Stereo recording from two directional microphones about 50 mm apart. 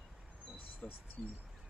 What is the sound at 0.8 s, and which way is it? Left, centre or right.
Speech, left.